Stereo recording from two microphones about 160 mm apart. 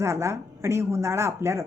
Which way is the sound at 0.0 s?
15° right (ahead or behind).